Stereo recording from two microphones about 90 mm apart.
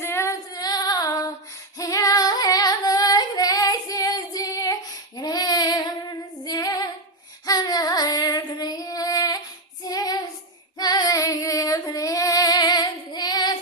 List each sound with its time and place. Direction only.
0.0 s female singing: 30° left (ahead or behind)
0.5 s female singing: 45° left (ahead or behind)
7.4 s child singing: 50° left (ahead or behind)
8.5 s female singing: 50° left (ahead or behind)
9.8 s child singing: 45° left (ahead or behind)
10.8 s female singing: 50° left (ahead or behind)